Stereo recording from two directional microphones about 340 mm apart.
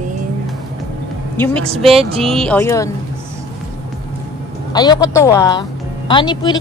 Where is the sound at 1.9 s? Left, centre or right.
Centre.